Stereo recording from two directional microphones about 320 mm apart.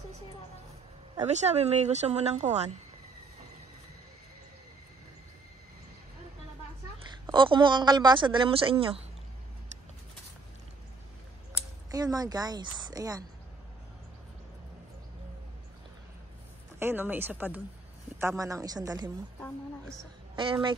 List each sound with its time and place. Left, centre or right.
1.1 s speech: right
7.2 s speech: centre
11.9 s speech: centre
16.8 s speech: centre
20.3 s speech: centre